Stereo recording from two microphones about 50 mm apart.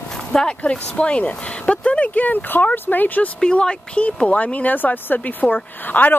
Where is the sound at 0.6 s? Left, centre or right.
Left.